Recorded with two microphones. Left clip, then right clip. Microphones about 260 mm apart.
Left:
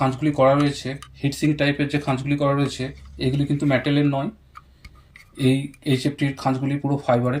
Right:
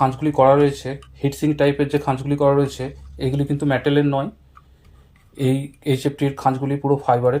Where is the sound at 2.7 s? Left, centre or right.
Centre.